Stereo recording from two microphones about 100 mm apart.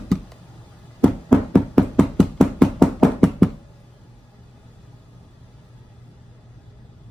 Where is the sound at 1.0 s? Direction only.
10° left (ahead or behind).